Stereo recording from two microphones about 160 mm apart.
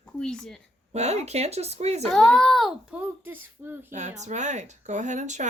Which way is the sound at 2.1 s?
5° left (ahead or behind).